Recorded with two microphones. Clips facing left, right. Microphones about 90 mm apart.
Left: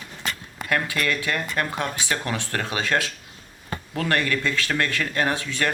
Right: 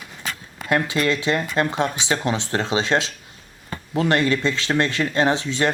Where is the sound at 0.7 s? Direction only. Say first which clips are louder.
Right 4 dB; 20° right (ahead or behind).